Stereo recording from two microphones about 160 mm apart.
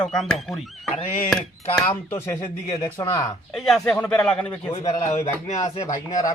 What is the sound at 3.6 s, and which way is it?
A man's voice, centre (ahead or behind).